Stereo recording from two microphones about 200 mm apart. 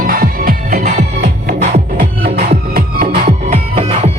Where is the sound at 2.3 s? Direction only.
50° right (ahead or behind).